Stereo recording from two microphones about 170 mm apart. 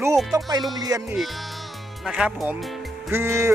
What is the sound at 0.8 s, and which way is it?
Speech, 20° right (ahead or behind).